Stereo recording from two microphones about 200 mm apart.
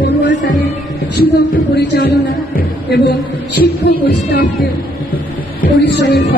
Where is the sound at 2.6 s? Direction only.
55° left (ahead or behind).